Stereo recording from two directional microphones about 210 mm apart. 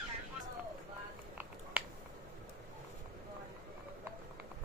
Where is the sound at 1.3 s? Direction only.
5° right (ahead or behind).